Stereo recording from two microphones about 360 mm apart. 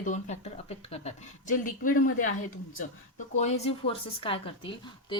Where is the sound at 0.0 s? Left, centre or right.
Centre.